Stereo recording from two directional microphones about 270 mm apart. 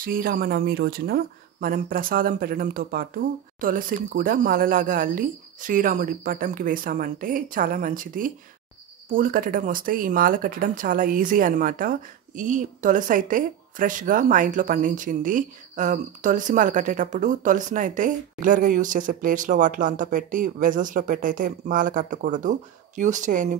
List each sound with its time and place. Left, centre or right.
0.0 s speech: right